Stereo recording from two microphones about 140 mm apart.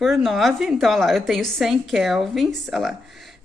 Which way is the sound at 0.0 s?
Centre (ahead or behind).